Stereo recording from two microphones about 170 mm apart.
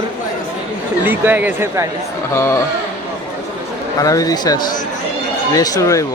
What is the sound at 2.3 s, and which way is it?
Speech, 15° left (ahead or behind).